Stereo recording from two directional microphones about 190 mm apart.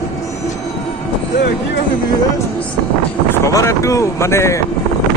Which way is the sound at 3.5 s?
15° left (ahead or behind).